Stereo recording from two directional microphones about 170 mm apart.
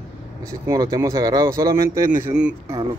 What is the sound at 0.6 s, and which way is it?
Speech, 20° right (ahead or behind).